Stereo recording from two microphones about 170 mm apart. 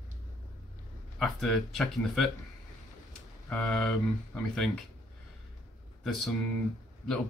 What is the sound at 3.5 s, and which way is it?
Speech, centre (ahead or behind).